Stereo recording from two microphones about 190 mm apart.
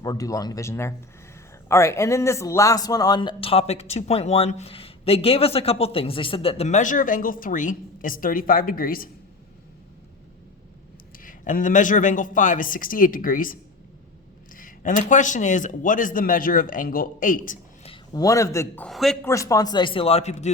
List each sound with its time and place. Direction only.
0.0 s speech: 20° left (ahead or behind); by 9.0 s 50° left (ahead or behind)
11.2 s a man's voice: 45° left (ahead or behind)
17.8 s speech: 25° left (ahead or behind)
18.9 s speech: centre (ahead or behind)
19.2 s speech: 15° left (ahead or behind); by 20.5 s 35° left (ahead or behind)